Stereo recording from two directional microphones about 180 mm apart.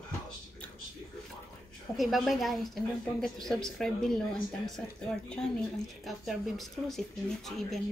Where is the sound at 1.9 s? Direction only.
Centre (ahead or behind).